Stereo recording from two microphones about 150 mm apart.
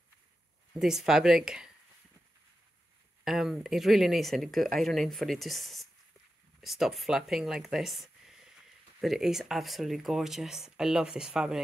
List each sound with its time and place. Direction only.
0.7 s speech: 5° right (ahead or behind)
3.3 s speech: 5° right (ahead or behind)